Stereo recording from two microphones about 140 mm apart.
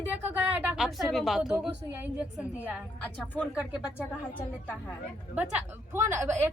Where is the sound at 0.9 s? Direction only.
Centre (ahead or behind).